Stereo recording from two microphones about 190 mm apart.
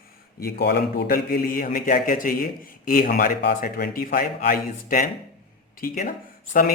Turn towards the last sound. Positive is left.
turn(degrees=50)  # may be behind; listen again after turning